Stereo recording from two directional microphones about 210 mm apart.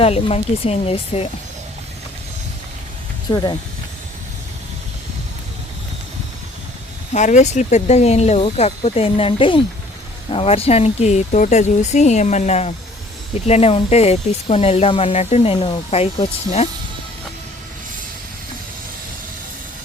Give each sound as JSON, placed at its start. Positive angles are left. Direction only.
{"t": 0.0, "sound": "speech", "side_deg": 30}
{"t": 3.2, "sound": "speech", "side_deg": 20}
{"t": 7.1, "sound": "speech", "side_deg": 35}